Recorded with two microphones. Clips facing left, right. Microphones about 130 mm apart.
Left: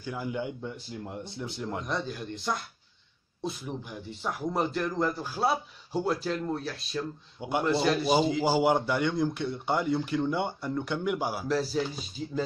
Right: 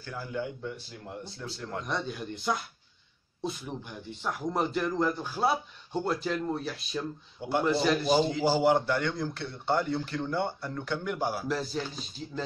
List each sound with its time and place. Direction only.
0.0 s speech: 15° left (ahead or behind)
1.8 s speech: centre (ahead or behind)